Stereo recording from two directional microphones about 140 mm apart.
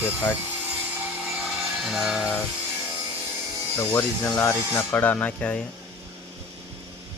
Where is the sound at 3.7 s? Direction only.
15° left (ahead or behind).